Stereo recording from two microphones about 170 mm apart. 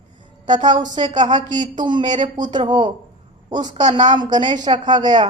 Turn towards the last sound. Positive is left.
turn(degrees=-25)  # may be behind; listen again after turning